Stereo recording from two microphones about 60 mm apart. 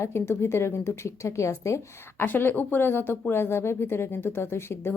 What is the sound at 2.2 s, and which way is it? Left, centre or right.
Speech, left.